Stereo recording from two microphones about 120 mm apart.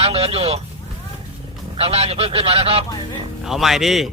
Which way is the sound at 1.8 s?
55° right (ahead or behind).